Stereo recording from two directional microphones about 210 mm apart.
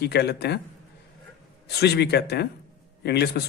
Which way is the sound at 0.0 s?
50° left (ahead or behind).